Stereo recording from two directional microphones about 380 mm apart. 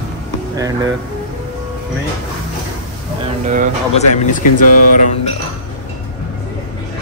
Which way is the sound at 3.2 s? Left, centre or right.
Centre.